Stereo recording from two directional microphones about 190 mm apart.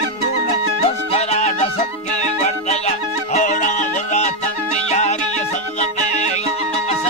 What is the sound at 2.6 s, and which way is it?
Music, 35° left (ahead or behind).